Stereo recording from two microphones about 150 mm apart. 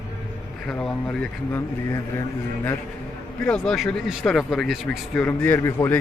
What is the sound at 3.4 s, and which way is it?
Speech, 5° left (ahead or behind).